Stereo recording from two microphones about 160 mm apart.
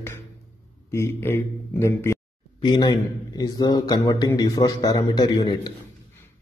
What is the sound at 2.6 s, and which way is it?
A man's voice, 25° left (ahead or behind).